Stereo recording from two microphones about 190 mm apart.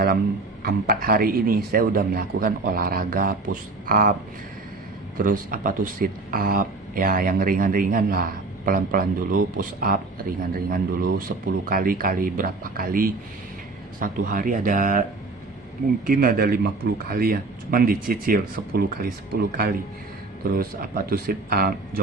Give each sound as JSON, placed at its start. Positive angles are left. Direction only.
{"t": 0.6, "sound": "speech", "side_deg": -50}
{"t": 5.1, "sound": "speech", "side_deg": -45}
{"t": 16.0, "sound": "speech", "side_deg": -50}